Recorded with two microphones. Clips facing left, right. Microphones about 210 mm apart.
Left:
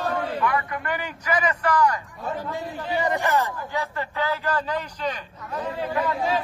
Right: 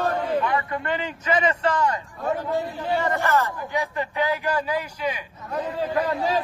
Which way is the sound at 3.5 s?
15° right (ahead or behind).